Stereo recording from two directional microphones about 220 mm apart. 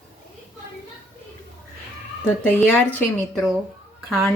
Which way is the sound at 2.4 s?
10° left (ahead or behind).